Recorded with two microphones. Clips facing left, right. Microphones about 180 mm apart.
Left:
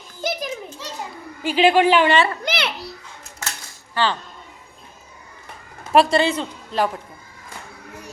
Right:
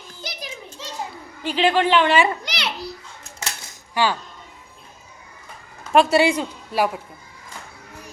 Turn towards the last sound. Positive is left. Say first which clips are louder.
# even
turn(degrees=-10)  # may be behind; listen again after turning